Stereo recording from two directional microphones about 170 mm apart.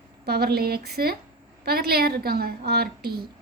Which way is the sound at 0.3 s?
65° right (ahead or behind).